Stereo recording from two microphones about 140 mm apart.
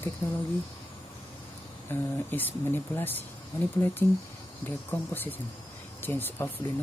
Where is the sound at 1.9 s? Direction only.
15° left (ahead or behind).